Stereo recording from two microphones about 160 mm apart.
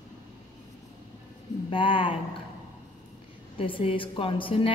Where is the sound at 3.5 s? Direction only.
35° left (ahead or behind).